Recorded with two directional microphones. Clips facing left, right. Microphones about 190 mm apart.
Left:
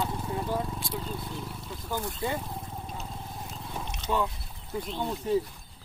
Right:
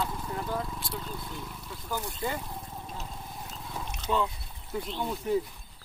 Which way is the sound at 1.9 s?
20° left (ahead or behind).